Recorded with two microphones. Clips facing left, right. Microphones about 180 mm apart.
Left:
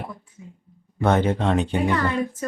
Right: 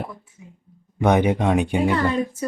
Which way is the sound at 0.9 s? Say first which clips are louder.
Right 2 dB; 15° right (ahead or behind).